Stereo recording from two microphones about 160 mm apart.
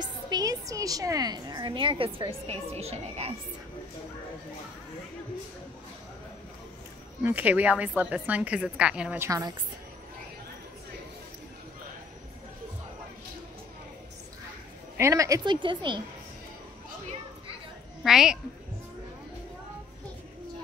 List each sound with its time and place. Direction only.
0.0 s a woman's voice: 25° right (ahead or behind); by 3.3 s 40° right (ahead or behind)
7.2 s a woman's voice: 10° right (ahead or behind)
15.0 s a woman's voice: 20° right (ahead or behind)
18.0 s a woman's voice: 5° right (ahead or behind)